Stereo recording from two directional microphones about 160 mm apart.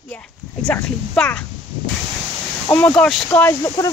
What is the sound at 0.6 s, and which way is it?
Speech, 5° left (ahead or behind).